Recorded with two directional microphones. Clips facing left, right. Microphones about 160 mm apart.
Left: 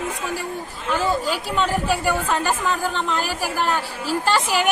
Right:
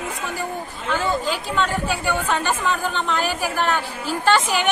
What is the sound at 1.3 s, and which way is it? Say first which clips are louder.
A woman's voice: left 1 dB; 10° left (ahead or behind).